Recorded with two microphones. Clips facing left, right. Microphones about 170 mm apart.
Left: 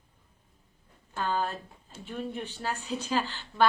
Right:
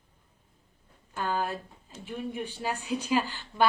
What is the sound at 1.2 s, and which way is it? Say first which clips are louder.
A woman's voice: even; 10° right (ahead or behind).